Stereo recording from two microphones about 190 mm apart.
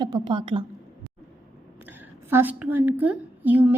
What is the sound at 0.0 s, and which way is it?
Speech, 25° right (ahead or behind).